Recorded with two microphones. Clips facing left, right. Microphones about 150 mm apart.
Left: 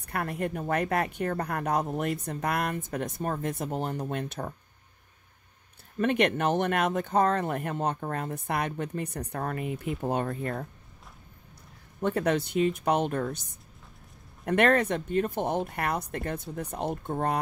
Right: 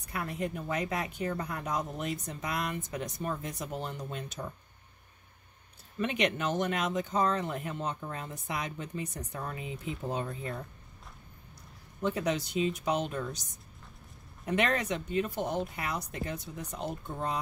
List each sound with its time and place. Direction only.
0.0 s speech: 60° left (ahead or behind)
5.9 s speech: 50° left (ahead or behind)
12.0 s speech: 60° left (ahead or behind)